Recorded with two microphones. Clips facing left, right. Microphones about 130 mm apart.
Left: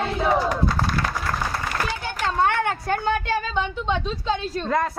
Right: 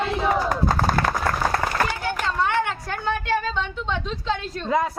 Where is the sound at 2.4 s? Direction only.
55° left (ahead or behind).